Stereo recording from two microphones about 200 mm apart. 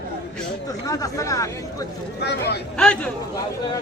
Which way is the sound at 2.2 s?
55° left (ahead or behind).